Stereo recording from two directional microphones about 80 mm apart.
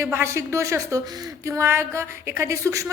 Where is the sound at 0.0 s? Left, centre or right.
Right.